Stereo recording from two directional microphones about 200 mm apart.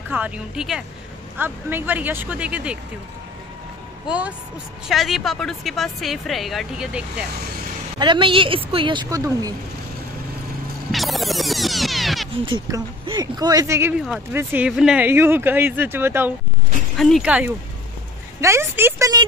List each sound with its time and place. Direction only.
0.1 s a woman's voice: 5° right (ahead or behind)
4.8 s a woman's voice: centre (ahead or behind)
8.0 s speech: 25° right (ahead or behind)
10.9 s music: centre (ahead or behind)
12.4 s speech: 25° right (ahead or behind)
16.9 s a woman's voice: centre (ahead or behind); by 19.2 s 15° right (ahead or behind)